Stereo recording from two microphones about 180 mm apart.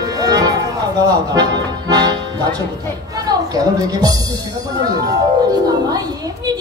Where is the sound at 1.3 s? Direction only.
20° right (ahead or behind).